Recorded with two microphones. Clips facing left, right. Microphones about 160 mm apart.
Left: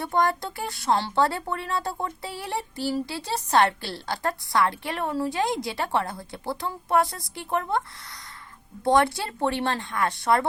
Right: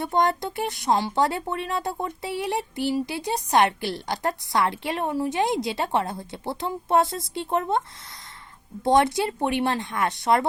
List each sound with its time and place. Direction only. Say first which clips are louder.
0.0 s speech: right 1 dB; 20° right (ahead or behind)